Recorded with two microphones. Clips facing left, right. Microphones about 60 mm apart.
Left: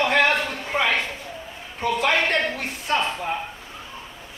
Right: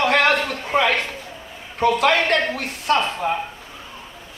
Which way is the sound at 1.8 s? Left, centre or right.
Right.